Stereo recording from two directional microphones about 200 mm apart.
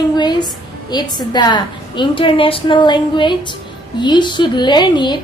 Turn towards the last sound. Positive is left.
turn(degrees=20)  # may be behind; listen again after turning